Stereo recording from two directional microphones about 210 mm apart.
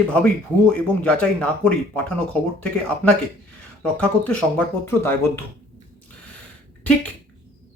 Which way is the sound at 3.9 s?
5° left (ahead or behind).